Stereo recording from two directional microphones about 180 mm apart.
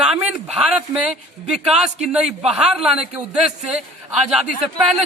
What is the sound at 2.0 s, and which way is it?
Speech, 5° right (ahead or behind).